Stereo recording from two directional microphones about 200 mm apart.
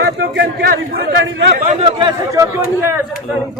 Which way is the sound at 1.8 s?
25° right (ahead or behind).